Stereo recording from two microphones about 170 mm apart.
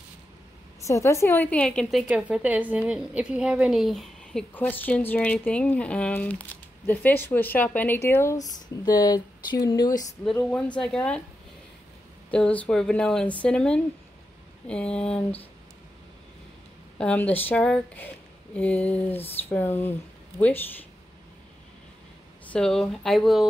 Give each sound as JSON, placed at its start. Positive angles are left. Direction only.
{"t": 0.8, "sound": "a woman's voice", "side_deg": 15}
{"t": 10.3, "sound": "speech", "side_deg": 5}
{"t": 12.3, "sound": "speech", "side_deg": 5}
{"t": 17.0, "sound": "a woman's voice", "side_deg": 10}
{"t": 22.5, "sound": "speech", "side_deg": 5}